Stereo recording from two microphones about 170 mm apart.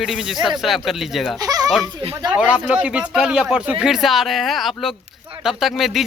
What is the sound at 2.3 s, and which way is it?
A man's voice, 5° right (ahead or behind).